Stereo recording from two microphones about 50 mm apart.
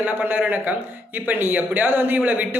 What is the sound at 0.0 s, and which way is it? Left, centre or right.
Speech, right.